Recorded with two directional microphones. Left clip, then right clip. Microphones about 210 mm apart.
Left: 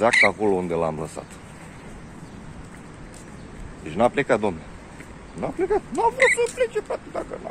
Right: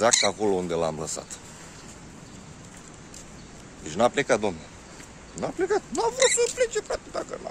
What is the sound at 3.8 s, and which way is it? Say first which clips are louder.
Speech: left 2 dB; 20° right (ahead or behind).